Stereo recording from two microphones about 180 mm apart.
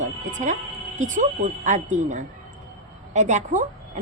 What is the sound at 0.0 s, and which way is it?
Music, 45° right (ahead or behind).